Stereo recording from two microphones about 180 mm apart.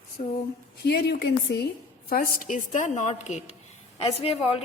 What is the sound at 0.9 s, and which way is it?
Speech, 65° left (ahead or behind).